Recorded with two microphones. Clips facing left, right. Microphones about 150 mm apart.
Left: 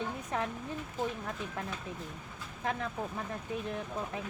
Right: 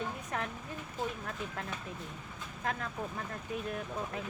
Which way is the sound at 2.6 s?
10° left (ahead or behind).